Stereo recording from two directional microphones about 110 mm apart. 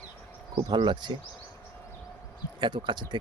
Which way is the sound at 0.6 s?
45° right (ahead or behind).